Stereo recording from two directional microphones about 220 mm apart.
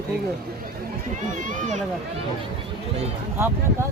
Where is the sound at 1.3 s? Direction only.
35° right (ahead or behind).